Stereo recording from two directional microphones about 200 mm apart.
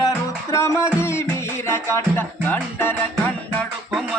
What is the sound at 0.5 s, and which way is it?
Music, 15° left (ahead or behind).